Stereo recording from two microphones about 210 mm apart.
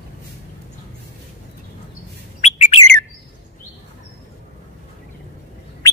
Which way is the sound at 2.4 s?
30° left (ahead or behind).